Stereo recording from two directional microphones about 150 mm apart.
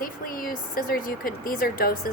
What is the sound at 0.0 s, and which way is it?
Speech, 70° left (ahead or behind).